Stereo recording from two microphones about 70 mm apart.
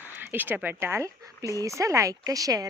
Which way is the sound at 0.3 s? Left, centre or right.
Right.